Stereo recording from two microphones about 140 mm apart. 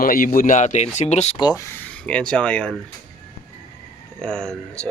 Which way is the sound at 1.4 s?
25° left (ahead or behind).